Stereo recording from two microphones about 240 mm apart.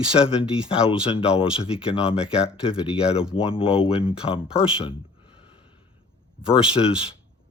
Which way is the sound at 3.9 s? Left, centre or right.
Left.